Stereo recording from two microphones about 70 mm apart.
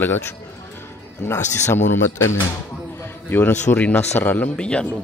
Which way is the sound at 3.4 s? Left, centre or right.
Left.